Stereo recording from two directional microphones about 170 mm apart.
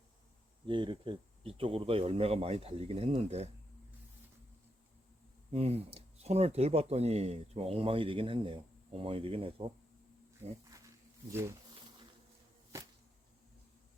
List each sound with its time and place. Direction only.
0.7 s speech: 30° right (ahead or behind)
5.5 s speech: 35° right (ahead or behind)
10.7 s a sound: 20° right (ahead or behind)